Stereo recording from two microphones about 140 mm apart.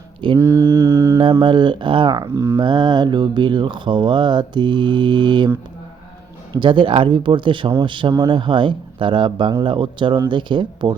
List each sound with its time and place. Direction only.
0.3 s mantra: 20° right (ahead or behind)
1.2 s mantra: 35° right (ahead or behind)
6.5 s mantra: 35° right (ahead or behind)